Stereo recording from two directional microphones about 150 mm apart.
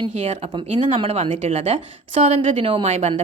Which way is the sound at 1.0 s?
45° right (ahead or behind).